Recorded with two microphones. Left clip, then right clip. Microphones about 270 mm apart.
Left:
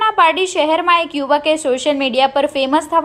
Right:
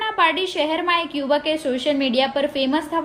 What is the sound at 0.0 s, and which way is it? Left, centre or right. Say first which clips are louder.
A woman's voice: left 6 dB; centre.